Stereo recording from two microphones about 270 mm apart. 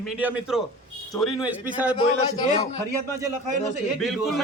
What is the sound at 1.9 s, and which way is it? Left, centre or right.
Speech, centre.